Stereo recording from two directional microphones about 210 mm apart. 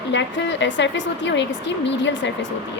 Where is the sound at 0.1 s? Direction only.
60° left (ahead or behind).